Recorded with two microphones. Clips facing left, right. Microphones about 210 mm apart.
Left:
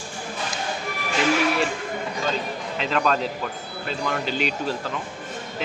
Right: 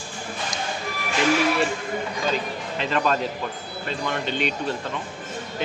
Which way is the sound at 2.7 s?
Centre (ahead or behind).